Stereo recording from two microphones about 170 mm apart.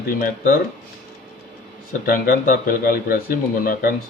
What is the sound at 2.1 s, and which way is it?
Speech, 50° left (ahead or behind).